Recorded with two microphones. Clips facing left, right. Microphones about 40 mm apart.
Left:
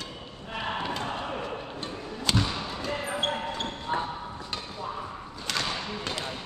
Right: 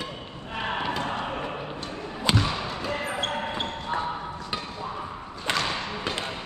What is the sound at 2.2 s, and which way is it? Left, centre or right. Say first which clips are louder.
Basketball bounce: right 3 dB; centre.